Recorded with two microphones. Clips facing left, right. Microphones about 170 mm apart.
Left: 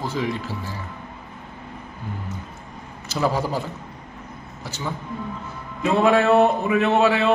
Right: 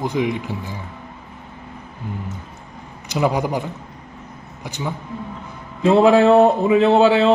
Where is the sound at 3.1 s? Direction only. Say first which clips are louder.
Right 3 dB; 15° right (ahead or behind).